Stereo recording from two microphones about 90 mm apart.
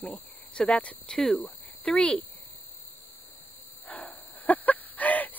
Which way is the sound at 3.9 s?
20° left (ahead or behind).